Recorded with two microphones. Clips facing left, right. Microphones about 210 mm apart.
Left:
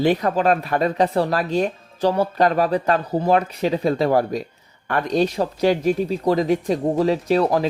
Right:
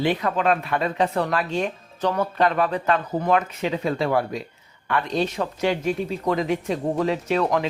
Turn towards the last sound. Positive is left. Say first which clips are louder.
# left 4 dB
turn(degrees=35)  # may be behind; listen again after turning